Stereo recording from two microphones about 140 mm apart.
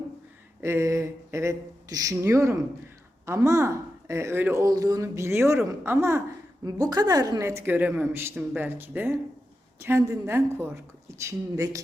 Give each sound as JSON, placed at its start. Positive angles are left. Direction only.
{"t": 0.6, "sound": "a woman's voice", "side_deg": -20}